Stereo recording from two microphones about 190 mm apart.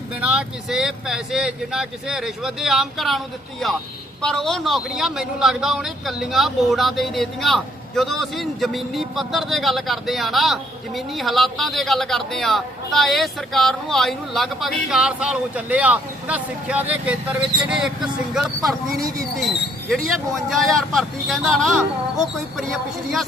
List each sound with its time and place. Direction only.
0.2 s a man's voice: centre (ahead or behind)
20.5 s a man's voice: centre (ahead or behind)